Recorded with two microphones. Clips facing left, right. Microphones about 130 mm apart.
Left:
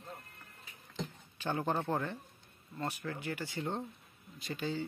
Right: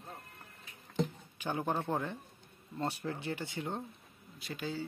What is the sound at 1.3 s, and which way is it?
Speech, 10° right (ahead or behind).